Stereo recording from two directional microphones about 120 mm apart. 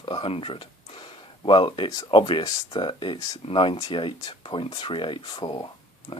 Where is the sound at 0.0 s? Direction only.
45° left (ahead or behind).